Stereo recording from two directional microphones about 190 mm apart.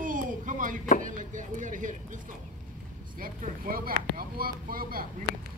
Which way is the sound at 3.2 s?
50° right (ahead or behind).